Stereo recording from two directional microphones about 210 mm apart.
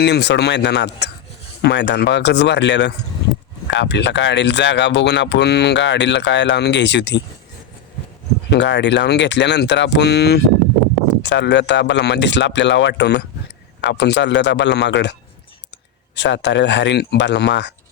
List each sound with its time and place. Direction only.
0.0 s speech: 55° left (ahead or behind)
8.4 s speech: 55° left (ahead or behind)
16.1 s speech: 55° left (ahead or behind)